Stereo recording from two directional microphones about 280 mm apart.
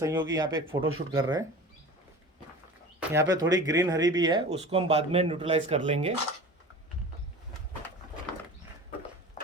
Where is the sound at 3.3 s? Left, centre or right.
Centre.